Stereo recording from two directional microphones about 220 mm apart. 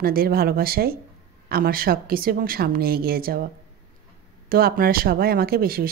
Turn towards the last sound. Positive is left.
turn(degrees=-40)  # may be behind; listen again after turning